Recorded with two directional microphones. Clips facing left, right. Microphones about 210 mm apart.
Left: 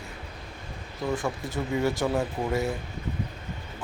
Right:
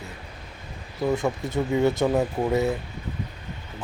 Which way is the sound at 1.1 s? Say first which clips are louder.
Right 5 dB; 20° right (ahead or behind).